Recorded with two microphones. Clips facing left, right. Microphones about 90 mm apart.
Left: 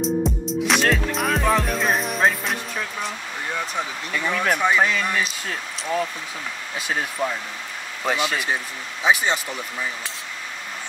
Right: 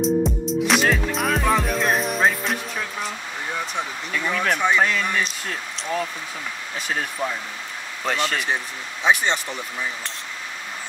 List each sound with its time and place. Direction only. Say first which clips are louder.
0.0 s music: right 2 dB; centre (ahead or behind)
3.5 s speech: left 1 dB; centre (ahead or behind)